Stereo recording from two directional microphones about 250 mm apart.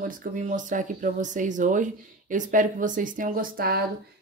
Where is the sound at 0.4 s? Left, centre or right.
Right.